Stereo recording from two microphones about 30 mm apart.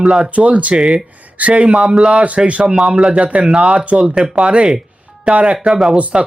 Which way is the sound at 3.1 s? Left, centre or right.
Right.